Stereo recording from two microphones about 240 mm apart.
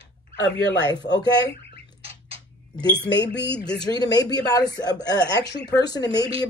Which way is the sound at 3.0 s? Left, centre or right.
Left.